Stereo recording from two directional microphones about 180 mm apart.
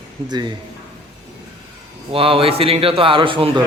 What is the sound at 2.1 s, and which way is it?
A man's voice, 30° right (ahead or behind).